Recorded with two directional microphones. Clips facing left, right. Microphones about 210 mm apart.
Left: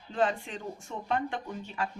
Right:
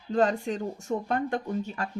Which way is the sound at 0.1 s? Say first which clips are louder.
Right 5 dB; 40° right (ahead or behind).